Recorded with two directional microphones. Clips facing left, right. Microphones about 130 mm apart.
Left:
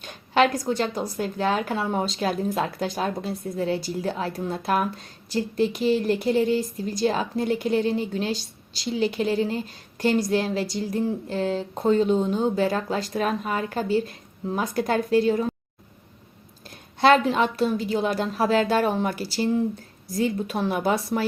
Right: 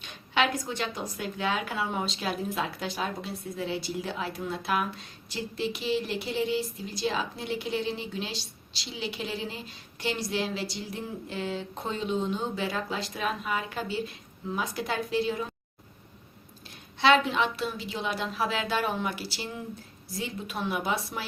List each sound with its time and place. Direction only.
0.0 s a woman's voice: 40° left (ahead or behind)
16.6 s a woman's voice: 45° left (ahead or behind)